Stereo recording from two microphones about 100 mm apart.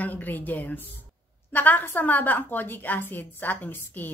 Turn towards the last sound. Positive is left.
turn(degrees=20)  # may be behind; listen again after turning